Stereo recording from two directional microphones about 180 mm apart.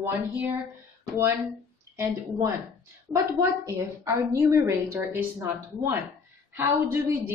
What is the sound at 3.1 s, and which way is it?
A woman's voice, 20° right (ahead or behind).